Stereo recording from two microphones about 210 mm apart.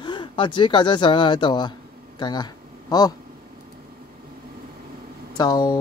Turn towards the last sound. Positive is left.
turn(degrees=20)  # may be behind; listen again after turning